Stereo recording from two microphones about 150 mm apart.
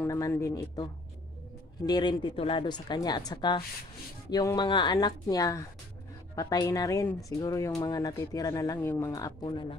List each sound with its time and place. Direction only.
0.0 s speech: 20° left (ahead or behind)
1.9 s speech: 30° left (ahead or behind)